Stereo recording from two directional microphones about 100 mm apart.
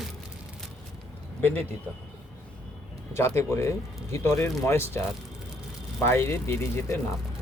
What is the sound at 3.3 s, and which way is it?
Speech, 25° left (ahead or behind).